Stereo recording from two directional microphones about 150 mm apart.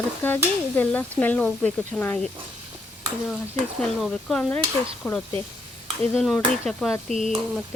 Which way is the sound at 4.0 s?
5° left (ahead or behind).